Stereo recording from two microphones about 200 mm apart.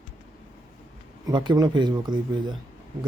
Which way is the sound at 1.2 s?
20° right (ahead or behind).